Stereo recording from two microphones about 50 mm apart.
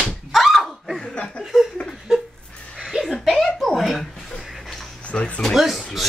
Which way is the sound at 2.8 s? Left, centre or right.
Centre.